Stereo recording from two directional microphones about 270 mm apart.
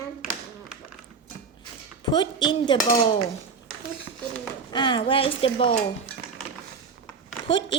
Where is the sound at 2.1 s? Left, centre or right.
Centre.